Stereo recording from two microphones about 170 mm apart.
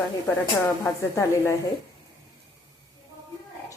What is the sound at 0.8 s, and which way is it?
Speech, 15° left (ahead or behind).